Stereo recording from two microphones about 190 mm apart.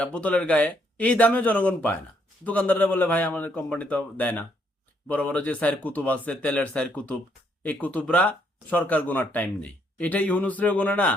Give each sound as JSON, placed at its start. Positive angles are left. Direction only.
{"t": 0.0, "sound": "a man's voice", "side_deg": 5}